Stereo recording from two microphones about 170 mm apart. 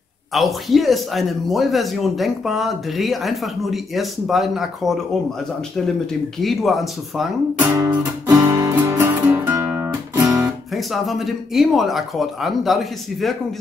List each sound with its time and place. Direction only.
0.3 s speech: centre (ahead or behind)
6.4 s speech: centre (ahead or behind)
7.5 s music: 15° right (ahead or behind)
10.4 s speech: centre (ahead or behind)